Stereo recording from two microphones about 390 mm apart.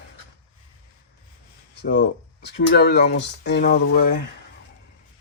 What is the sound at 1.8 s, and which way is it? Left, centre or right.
Speech, left.